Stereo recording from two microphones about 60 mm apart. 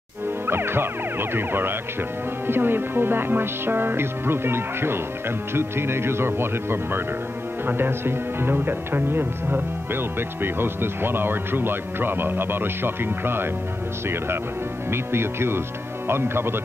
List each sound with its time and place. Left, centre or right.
0.5 s music: right
1.3 s speech: right
14.9 s speech: right